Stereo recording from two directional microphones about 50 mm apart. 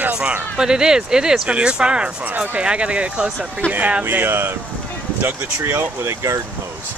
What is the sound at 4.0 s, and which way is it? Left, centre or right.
Speech, right.